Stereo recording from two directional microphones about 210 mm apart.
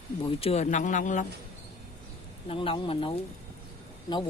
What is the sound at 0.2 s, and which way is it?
Speech, 25° left (ahead or behind).